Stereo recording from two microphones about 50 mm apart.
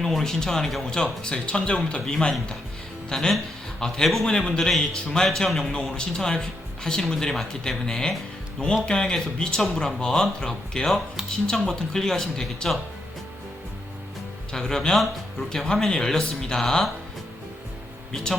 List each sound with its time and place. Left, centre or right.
0.0 s a man's voice: centre
14.5 s speech: centre
15.4 s speech: centre
18.1 s speech: centre